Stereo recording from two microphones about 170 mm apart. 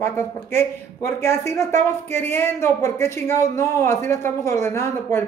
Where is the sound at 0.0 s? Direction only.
15° left (ahead or behind).